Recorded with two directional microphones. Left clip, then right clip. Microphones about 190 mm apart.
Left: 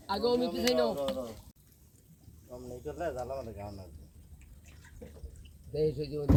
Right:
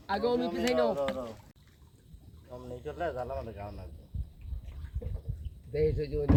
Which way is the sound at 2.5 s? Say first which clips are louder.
Right 1 dB; 45° left (ahead or behind).